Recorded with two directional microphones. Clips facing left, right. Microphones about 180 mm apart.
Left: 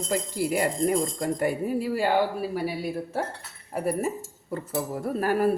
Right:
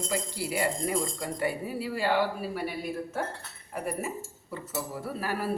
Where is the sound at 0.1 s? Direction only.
50° left (ahead or behind).